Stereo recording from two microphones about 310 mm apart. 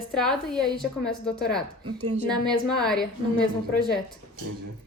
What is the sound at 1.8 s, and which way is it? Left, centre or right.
Speech, right.